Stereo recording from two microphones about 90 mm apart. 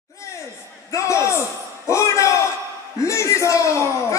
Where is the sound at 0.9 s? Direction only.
35° left (ahead or behind).